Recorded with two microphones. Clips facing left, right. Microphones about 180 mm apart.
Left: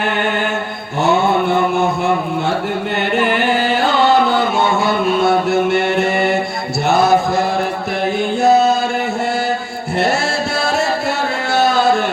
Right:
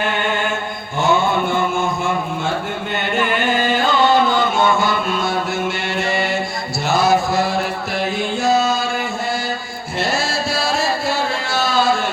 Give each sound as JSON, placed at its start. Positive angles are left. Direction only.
{"t": 1.0, "sound": "mantra", "side_deg": 65}
{"t": 3.2, "sound": "music", "side_deg": 65}
{"t": 4.8, "sound": "mantra", "side_deg": 60}
{"t": 8.4, "sound": "music", "side_deg": 60}
{"t": 11.5, "sound": "a sound", "side_deg": 60}